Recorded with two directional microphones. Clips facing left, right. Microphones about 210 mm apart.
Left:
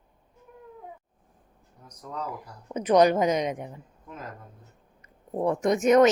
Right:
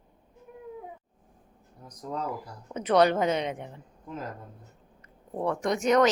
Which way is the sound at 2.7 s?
15° left (ahead or behind).